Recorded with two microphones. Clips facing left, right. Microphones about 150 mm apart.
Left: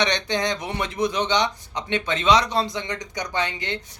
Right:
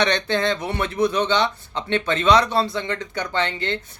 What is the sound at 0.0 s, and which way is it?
Speech, 15° left (ahead or behind).